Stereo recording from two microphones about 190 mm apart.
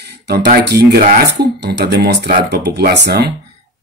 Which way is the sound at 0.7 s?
55° right (ahead or behind).